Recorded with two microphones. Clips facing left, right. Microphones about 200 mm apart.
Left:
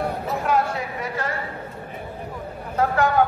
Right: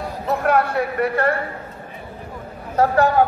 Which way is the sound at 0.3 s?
60° right (ahead or behind).